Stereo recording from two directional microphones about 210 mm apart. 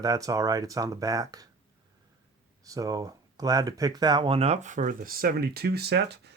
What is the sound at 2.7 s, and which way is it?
Speech, 15° right (ahead or behind).